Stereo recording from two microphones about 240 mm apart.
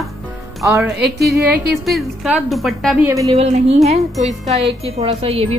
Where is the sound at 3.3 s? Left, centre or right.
Right.